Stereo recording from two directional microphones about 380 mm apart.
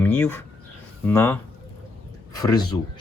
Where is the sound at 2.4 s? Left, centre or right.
Centre.